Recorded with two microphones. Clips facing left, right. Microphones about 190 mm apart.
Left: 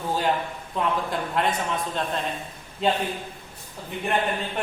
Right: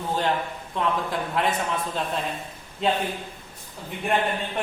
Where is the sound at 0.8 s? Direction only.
Centre (ahead or behind).